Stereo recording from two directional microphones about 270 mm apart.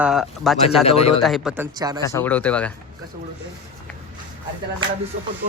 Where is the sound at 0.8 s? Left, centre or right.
Left.